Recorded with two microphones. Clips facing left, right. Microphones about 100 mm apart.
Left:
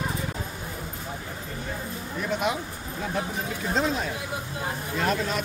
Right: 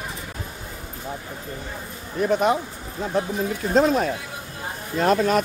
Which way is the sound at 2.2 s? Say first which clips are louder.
Right 8 dB; 40° right (ahead or behind).